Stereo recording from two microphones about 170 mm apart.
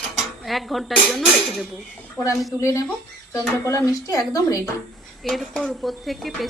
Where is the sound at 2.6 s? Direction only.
20° left (ahead or behind).